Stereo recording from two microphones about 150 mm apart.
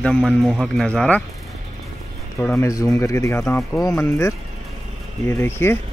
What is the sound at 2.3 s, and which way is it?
Speech, 15° left (ahead or behind).